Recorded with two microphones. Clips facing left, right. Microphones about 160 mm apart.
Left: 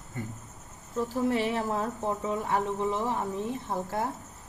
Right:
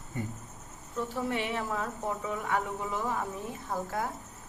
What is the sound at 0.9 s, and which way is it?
Speech, 35° left (ahead or behind).